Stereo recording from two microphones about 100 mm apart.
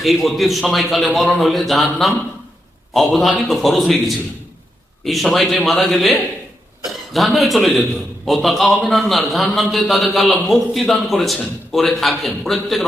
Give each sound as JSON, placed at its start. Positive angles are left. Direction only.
{"t": 0.0, "sound": "a man's voice", "side_deg": 0}
{"t": 5.0, "sound": "a man's voice", "side_deg": 0}